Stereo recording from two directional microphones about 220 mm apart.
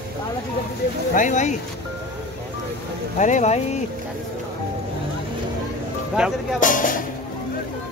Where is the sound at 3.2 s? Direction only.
35° left (ahead or behind).